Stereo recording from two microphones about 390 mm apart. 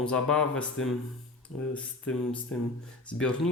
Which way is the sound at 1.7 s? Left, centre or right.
Centre.